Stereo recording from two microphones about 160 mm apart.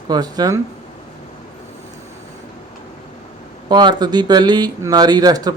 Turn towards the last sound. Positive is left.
turn(degrees=-25)  # may be behind; listen again after turning